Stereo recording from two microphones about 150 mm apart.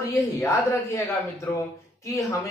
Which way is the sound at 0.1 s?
20° left (ahead or behind).